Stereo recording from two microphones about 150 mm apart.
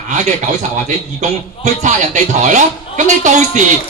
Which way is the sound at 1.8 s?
55° right (ahead or behind).